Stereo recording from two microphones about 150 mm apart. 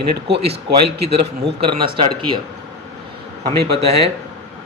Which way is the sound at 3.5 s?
40° right (ahead or behind).